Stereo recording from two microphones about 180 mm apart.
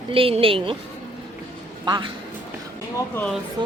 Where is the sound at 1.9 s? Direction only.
25° right (ahead or behind).